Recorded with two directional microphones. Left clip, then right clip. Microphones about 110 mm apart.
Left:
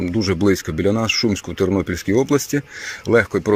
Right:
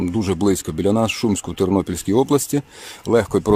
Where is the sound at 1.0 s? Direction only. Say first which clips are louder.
Left 2 dB; 40° right (ahead or behind).